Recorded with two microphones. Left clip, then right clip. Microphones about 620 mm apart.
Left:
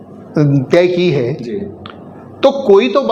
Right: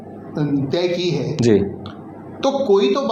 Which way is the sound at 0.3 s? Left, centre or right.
Left.